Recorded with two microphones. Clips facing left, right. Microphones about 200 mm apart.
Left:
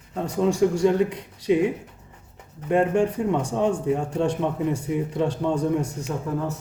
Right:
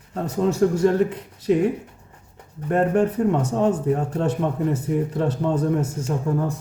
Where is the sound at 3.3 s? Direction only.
5° right (ahead or behind).